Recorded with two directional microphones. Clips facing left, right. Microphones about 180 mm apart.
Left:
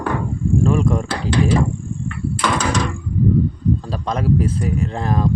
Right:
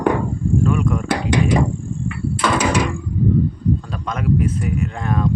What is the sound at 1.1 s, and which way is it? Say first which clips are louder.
Speech: right 1 dB; 15° right (ahead or behind).